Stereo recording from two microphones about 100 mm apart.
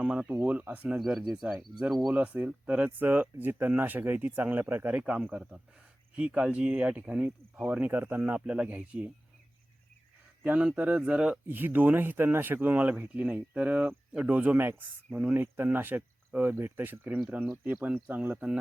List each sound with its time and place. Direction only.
0.0 s speech: 10° right (ahead or behind)
0.9 s speech: centre (ahead or behind)
2.1 s speech: 15° right (ahead or behind)
10.4 s speech: 15° right (ahead or behind)